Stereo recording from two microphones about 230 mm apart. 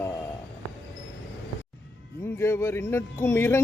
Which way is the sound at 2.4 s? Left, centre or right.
Centre.